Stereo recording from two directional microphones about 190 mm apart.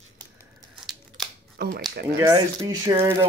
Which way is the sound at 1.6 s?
55° right (ahead or behind).